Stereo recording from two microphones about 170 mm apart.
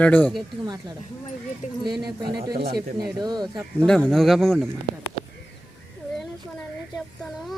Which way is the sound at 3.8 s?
5° left (ahead or behind).